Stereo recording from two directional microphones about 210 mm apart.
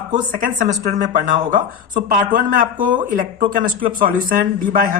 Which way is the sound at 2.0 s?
45° right (ahead or behind).